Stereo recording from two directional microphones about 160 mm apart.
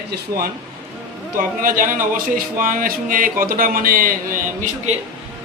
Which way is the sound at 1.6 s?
60° right (ahead or behind).